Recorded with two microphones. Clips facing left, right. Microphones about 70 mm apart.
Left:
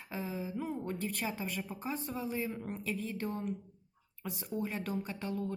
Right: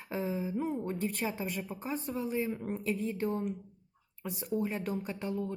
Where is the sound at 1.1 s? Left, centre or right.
Centre.